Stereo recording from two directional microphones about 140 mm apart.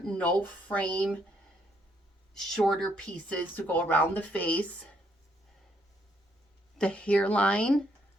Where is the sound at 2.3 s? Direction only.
Centre (ahead or behind).